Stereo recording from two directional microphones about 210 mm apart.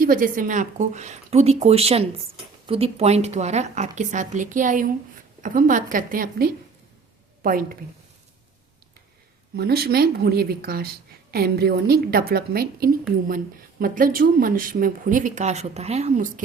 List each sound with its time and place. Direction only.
0.0 s a woman's voice: 40° right (ahead or behind)
9.6 s a woman's voice: 50° right (ahead or behind)